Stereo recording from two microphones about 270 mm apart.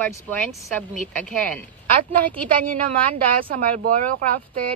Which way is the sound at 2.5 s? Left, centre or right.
Right.